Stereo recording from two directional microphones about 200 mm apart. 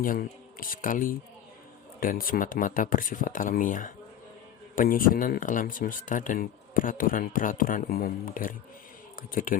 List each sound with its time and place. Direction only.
0.0 s speech: 45° left (ahead or behind)